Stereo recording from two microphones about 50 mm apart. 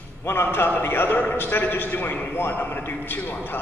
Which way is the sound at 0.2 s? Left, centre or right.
Left.